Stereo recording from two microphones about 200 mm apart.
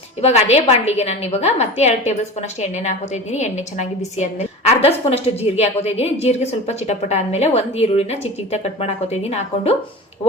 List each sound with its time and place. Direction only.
0.2 s a woman's voice: 30° left (ahead or behind)
3.3 s a woman's voice: 35° left (ahead or behind)